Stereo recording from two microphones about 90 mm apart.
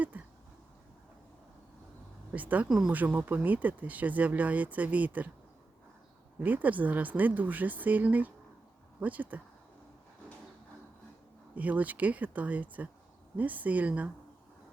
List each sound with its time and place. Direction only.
0.1 s a sound: 15° right (ahead or behind)
2.3 s speech: 20° right (ahead or behind)
2.6 s speech: 5° right (ahead or behind)
2.9 s speech: 20° right (ahead or behind)
6.4 s speech: 20° right (ahead or behind)
11.5 s speech: 15° right (ahead or behind)